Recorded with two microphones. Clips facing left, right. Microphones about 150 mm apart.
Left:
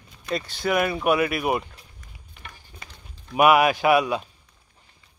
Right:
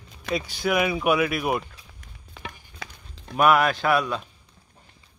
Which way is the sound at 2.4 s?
90° right.